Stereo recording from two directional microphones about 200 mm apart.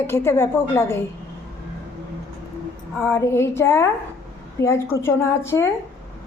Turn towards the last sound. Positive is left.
turn(degrees=15)  # may be behind; listen again after turning